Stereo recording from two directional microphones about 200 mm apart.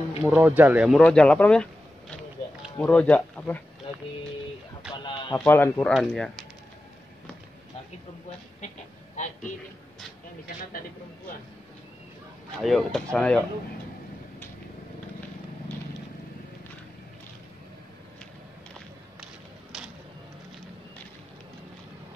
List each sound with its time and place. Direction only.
0.2 s speech: 5° right (ahead or behind)
3.9 s a sound: 25° left (ahead or behind)
4.9 s music: 25° left (ahead or behind)
5.4 s speech: 10° left (ahead or behind)
8.5 s a sound: 35° left (ahead or behind)
12.6 s speech: centre (ahead or behind)